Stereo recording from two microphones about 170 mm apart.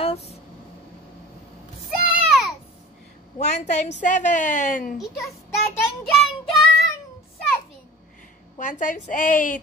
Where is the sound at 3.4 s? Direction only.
40° left (ahead or behind).